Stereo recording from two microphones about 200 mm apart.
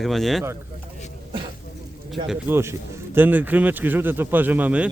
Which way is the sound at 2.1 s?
5° right (ahead or behind).